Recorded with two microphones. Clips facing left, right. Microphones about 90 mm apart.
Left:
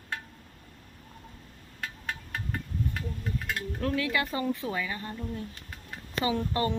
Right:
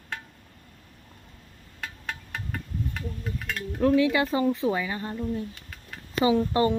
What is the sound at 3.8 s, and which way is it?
Speech, 20° right (ahead or behind).